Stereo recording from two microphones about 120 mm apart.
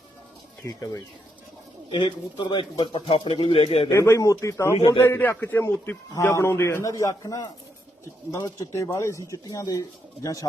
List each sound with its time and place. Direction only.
0.6 s speech: 30° left (ahead or behind); by 3.8 s 55° left (ahead or behind)
3.8 s speech: 25° left (ahead or behind)